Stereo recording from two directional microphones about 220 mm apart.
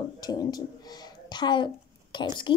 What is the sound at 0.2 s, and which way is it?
A woman's voice, 20° left (ahead or behind).